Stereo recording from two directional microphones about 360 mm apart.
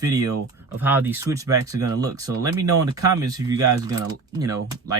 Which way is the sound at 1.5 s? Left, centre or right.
Right.